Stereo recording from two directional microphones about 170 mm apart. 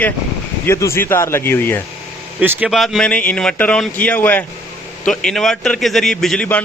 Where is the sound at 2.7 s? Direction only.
Centre (ahead or behind).